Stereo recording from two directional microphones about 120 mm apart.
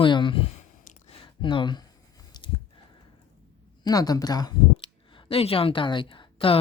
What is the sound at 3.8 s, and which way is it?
Speech, 30° left (ahead or behind).